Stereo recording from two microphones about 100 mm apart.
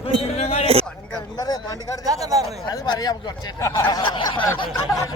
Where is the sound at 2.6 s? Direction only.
45° left (ahead or behind).